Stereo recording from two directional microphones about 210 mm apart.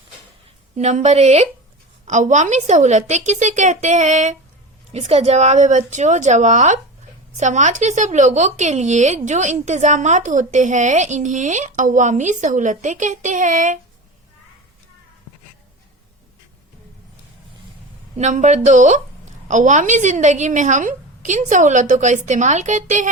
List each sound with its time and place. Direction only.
0.8 s speech: 35° right (ahead or behind)
18.2 s speech: 35° right (ahead or behind)